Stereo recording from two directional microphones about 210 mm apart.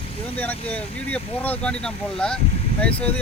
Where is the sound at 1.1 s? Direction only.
5° left (ahead or behind).